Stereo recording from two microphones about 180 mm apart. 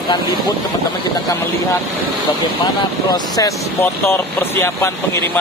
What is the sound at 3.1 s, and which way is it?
Speech, 20° left (ahead or behind).